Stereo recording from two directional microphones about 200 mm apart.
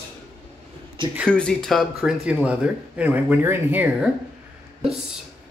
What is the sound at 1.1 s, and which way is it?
Speech, 5° left (ahead or behind).